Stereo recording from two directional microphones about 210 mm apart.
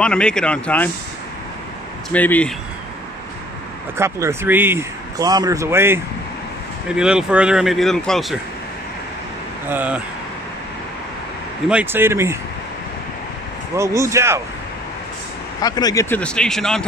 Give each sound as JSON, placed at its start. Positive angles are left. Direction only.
{"t": 0.0, "sound": "speech", "side_deg": 5}
{"t": 2.1, "sound": "speech", "side_deg": 5}
{"t": 4.0, "sound": "speech", "side_deg": -15}
{"t": 9.7, "sound": "speech", "side_deg": -5}
{"t": 11.7, "sound": "speech", "side_deg": -10}
{"t": 13.7, "sound": "speech", "side_deg": -15}
{"t": 15.6, "sound": "speech", "side_deg": 20}